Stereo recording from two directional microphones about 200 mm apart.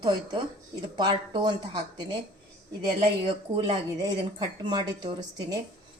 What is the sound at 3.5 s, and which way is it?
A woman's voice, 20° right (ahead or behind).